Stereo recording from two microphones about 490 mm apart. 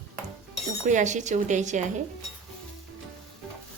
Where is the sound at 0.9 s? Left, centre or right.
Centre.